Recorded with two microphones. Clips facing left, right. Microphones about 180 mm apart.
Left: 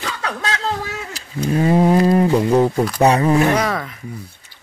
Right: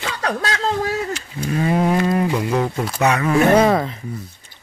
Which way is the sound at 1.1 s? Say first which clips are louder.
Left 3 dB; 35° left (ahead or behind).